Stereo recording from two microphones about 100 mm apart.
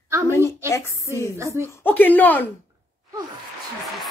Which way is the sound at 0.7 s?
30° left (ahead or behind).